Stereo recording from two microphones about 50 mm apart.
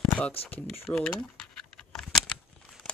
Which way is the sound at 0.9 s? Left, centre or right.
Centre.